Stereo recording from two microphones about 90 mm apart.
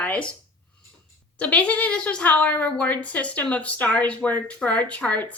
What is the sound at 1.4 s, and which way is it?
A woman's voice, 15° left (ahead or behind).